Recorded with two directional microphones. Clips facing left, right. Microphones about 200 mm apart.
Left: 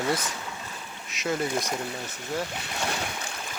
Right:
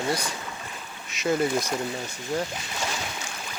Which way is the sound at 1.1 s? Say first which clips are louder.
Right 4 dB; centre (ahead or behind).